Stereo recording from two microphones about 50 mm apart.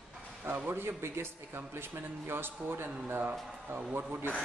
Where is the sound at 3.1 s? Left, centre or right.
Right.